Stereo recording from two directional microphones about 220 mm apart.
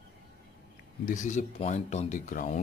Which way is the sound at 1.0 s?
35° left (ahead or behind).